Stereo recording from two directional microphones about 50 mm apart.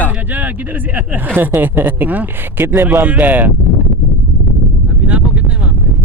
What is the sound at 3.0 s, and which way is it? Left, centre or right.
Speech, right.